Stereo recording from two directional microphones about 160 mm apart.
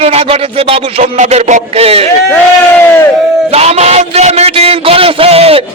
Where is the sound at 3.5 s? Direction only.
40° right (ahead or behind).